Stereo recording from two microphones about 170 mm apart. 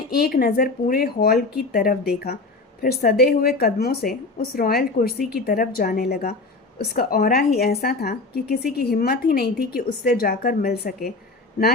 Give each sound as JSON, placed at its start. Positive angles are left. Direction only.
{"t": 0.2, "sound": "speech", "side_deg": 60}